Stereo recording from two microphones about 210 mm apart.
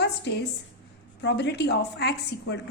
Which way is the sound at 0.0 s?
55° left (ahead or behind).